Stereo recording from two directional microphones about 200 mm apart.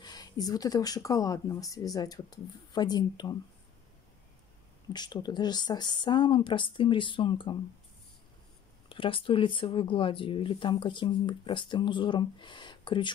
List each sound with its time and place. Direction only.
0.0 s speech: 20° left (ahead or behind)
4.9 s speech: 20° left (ahead or behind)
8.8 s speech: 25° left (ahead or behind)